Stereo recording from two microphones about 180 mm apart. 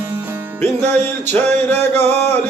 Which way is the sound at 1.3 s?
10° left (ahead or behind).